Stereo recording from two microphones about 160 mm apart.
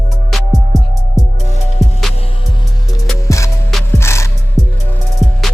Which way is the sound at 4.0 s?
15° left (ahead or behind).